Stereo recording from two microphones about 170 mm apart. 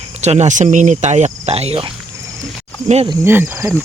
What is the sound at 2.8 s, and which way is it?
Speech, 40° right (ahead or behind).